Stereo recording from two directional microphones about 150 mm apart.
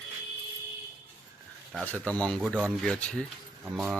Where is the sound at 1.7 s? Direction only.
10° left (ahead or behind).